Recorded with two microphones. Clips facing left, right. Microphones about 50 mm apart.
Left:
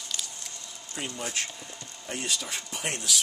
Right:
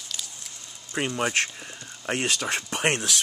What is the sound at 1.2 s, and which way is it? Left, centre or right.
Speech, right.